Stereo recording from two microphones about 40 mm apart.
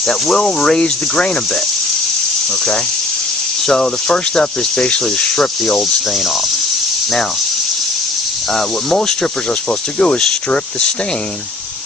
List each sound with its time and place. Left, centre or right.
0.1 s speech: centre
0.8 s speech: left
3.7 s speech: centre
10.0 s speech: left